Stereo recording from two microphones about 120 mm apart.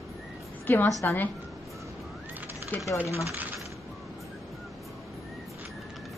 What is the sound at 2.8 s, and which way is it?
Speech, 25° left (ahead or behind).